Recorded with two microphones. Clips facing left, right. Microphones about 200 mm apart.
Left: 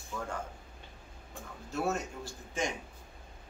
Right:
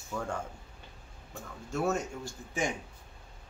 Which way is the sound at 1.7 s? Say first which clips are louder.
Right 2 dB; centre (ahead or behind).